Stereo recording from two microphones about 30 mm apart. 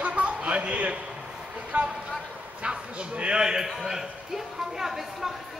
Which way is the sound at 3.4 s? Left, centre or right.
Centre.